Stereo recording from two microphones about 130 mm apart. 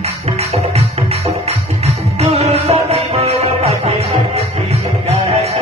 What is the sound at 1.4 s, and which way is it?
Music, 55° right (ahead or behind).